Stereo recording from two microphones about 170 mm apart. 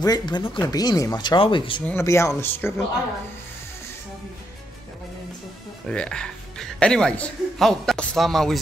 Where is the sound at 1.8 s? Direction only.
15° left (ahead or behind).